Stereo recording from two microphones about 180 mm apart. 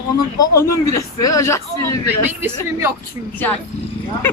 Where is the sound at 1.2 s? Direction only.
20° left (ahead or behind).